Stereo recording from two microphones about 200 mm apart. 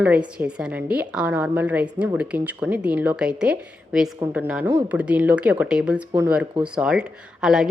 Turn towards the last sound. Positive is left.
turn(degrees=-5)  # may be behind; listen again after turning